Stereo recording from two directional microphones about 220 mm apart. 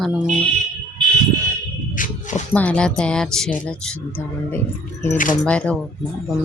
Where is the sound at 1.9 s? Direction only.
35° left (ahead or behind).